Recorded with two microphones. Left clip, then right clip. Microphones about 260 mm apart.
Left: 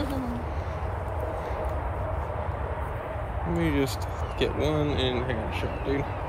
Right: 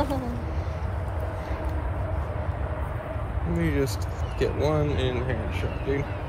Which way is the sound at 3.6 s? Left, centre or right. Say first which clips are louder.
Even; centre.